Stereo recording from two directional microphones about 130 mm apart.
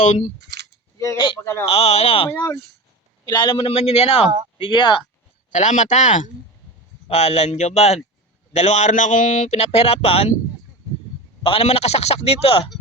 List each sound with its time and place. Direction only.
0.0 s speech: 70° left (ahead or behind)
1.7 s speech: 55° left (ahead or behind)
2.3 s speech: 20° left (ahead or behind)
3.2 s speech: 35° left (ahead or behind)
4.5 s speech: 40° left (ahead or behind)
5.5 s speech: 70° left (ahead or behind)
7.1 s speech: 55° left (ahead or behind)
11.4 s speech: 45° left (ahead or behind)